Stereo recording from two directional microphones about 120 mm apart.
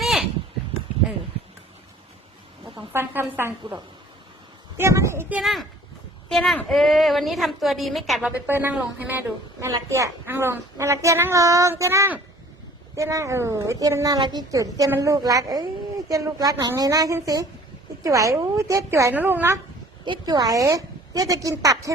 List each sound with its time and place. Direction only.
0.0 s a sound: 5° right (ahead or behind)
2.9 s a woman's voice: 20° right (ahead or behind)
4.8 s a woman's voice: 25° right (ahead or behind)
5.4 s a woman's voice: centre (ahead or behind)
8.2 s a woman's voice: 15° right (ahead or behind)
20.1 s a woman's voice: 35° right (ahead or behind)